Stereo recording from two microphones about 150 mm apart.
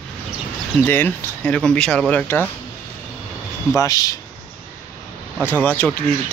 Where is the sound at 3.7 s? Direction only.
20° left (ahead or behind).